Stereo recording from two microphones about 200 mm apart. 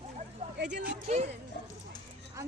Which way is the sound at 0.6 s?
60° right (ahead or behind).